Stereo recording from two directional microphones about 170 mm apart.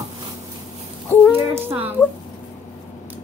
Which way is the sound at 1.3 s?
15° right (ahead or behind).